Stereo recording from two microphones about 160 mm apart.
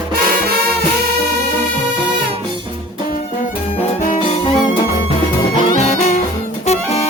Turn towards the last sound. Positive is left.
turn(degrees=40)  # may be behind; listen again after turning